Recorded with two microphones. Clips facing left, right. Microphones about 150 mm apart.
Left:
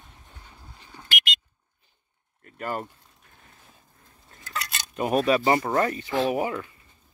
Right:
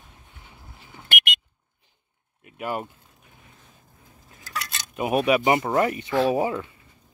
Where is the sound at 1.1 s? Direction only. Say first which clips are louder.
Right 2 dB; 55° right (ahead or behind).